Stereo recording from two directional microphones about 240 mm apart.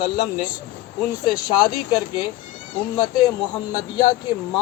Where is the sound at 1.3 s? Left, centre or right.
Centre.